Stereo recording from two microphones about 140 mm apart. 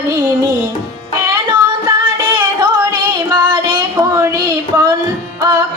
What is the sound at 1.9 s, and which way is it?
Music, 30° right (ahead or behind).